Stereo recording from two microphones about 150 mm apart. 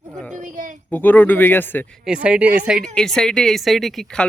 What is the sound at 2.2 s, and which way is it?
Speech, 10° right (ahead or behind).